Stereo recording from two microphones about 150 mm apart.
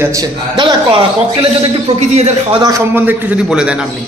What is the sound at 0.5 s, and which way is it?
A man's voice, 35° right (ahead or behind).